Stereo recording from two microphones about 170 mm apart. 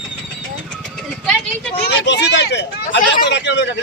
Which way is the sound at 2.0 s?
90° left.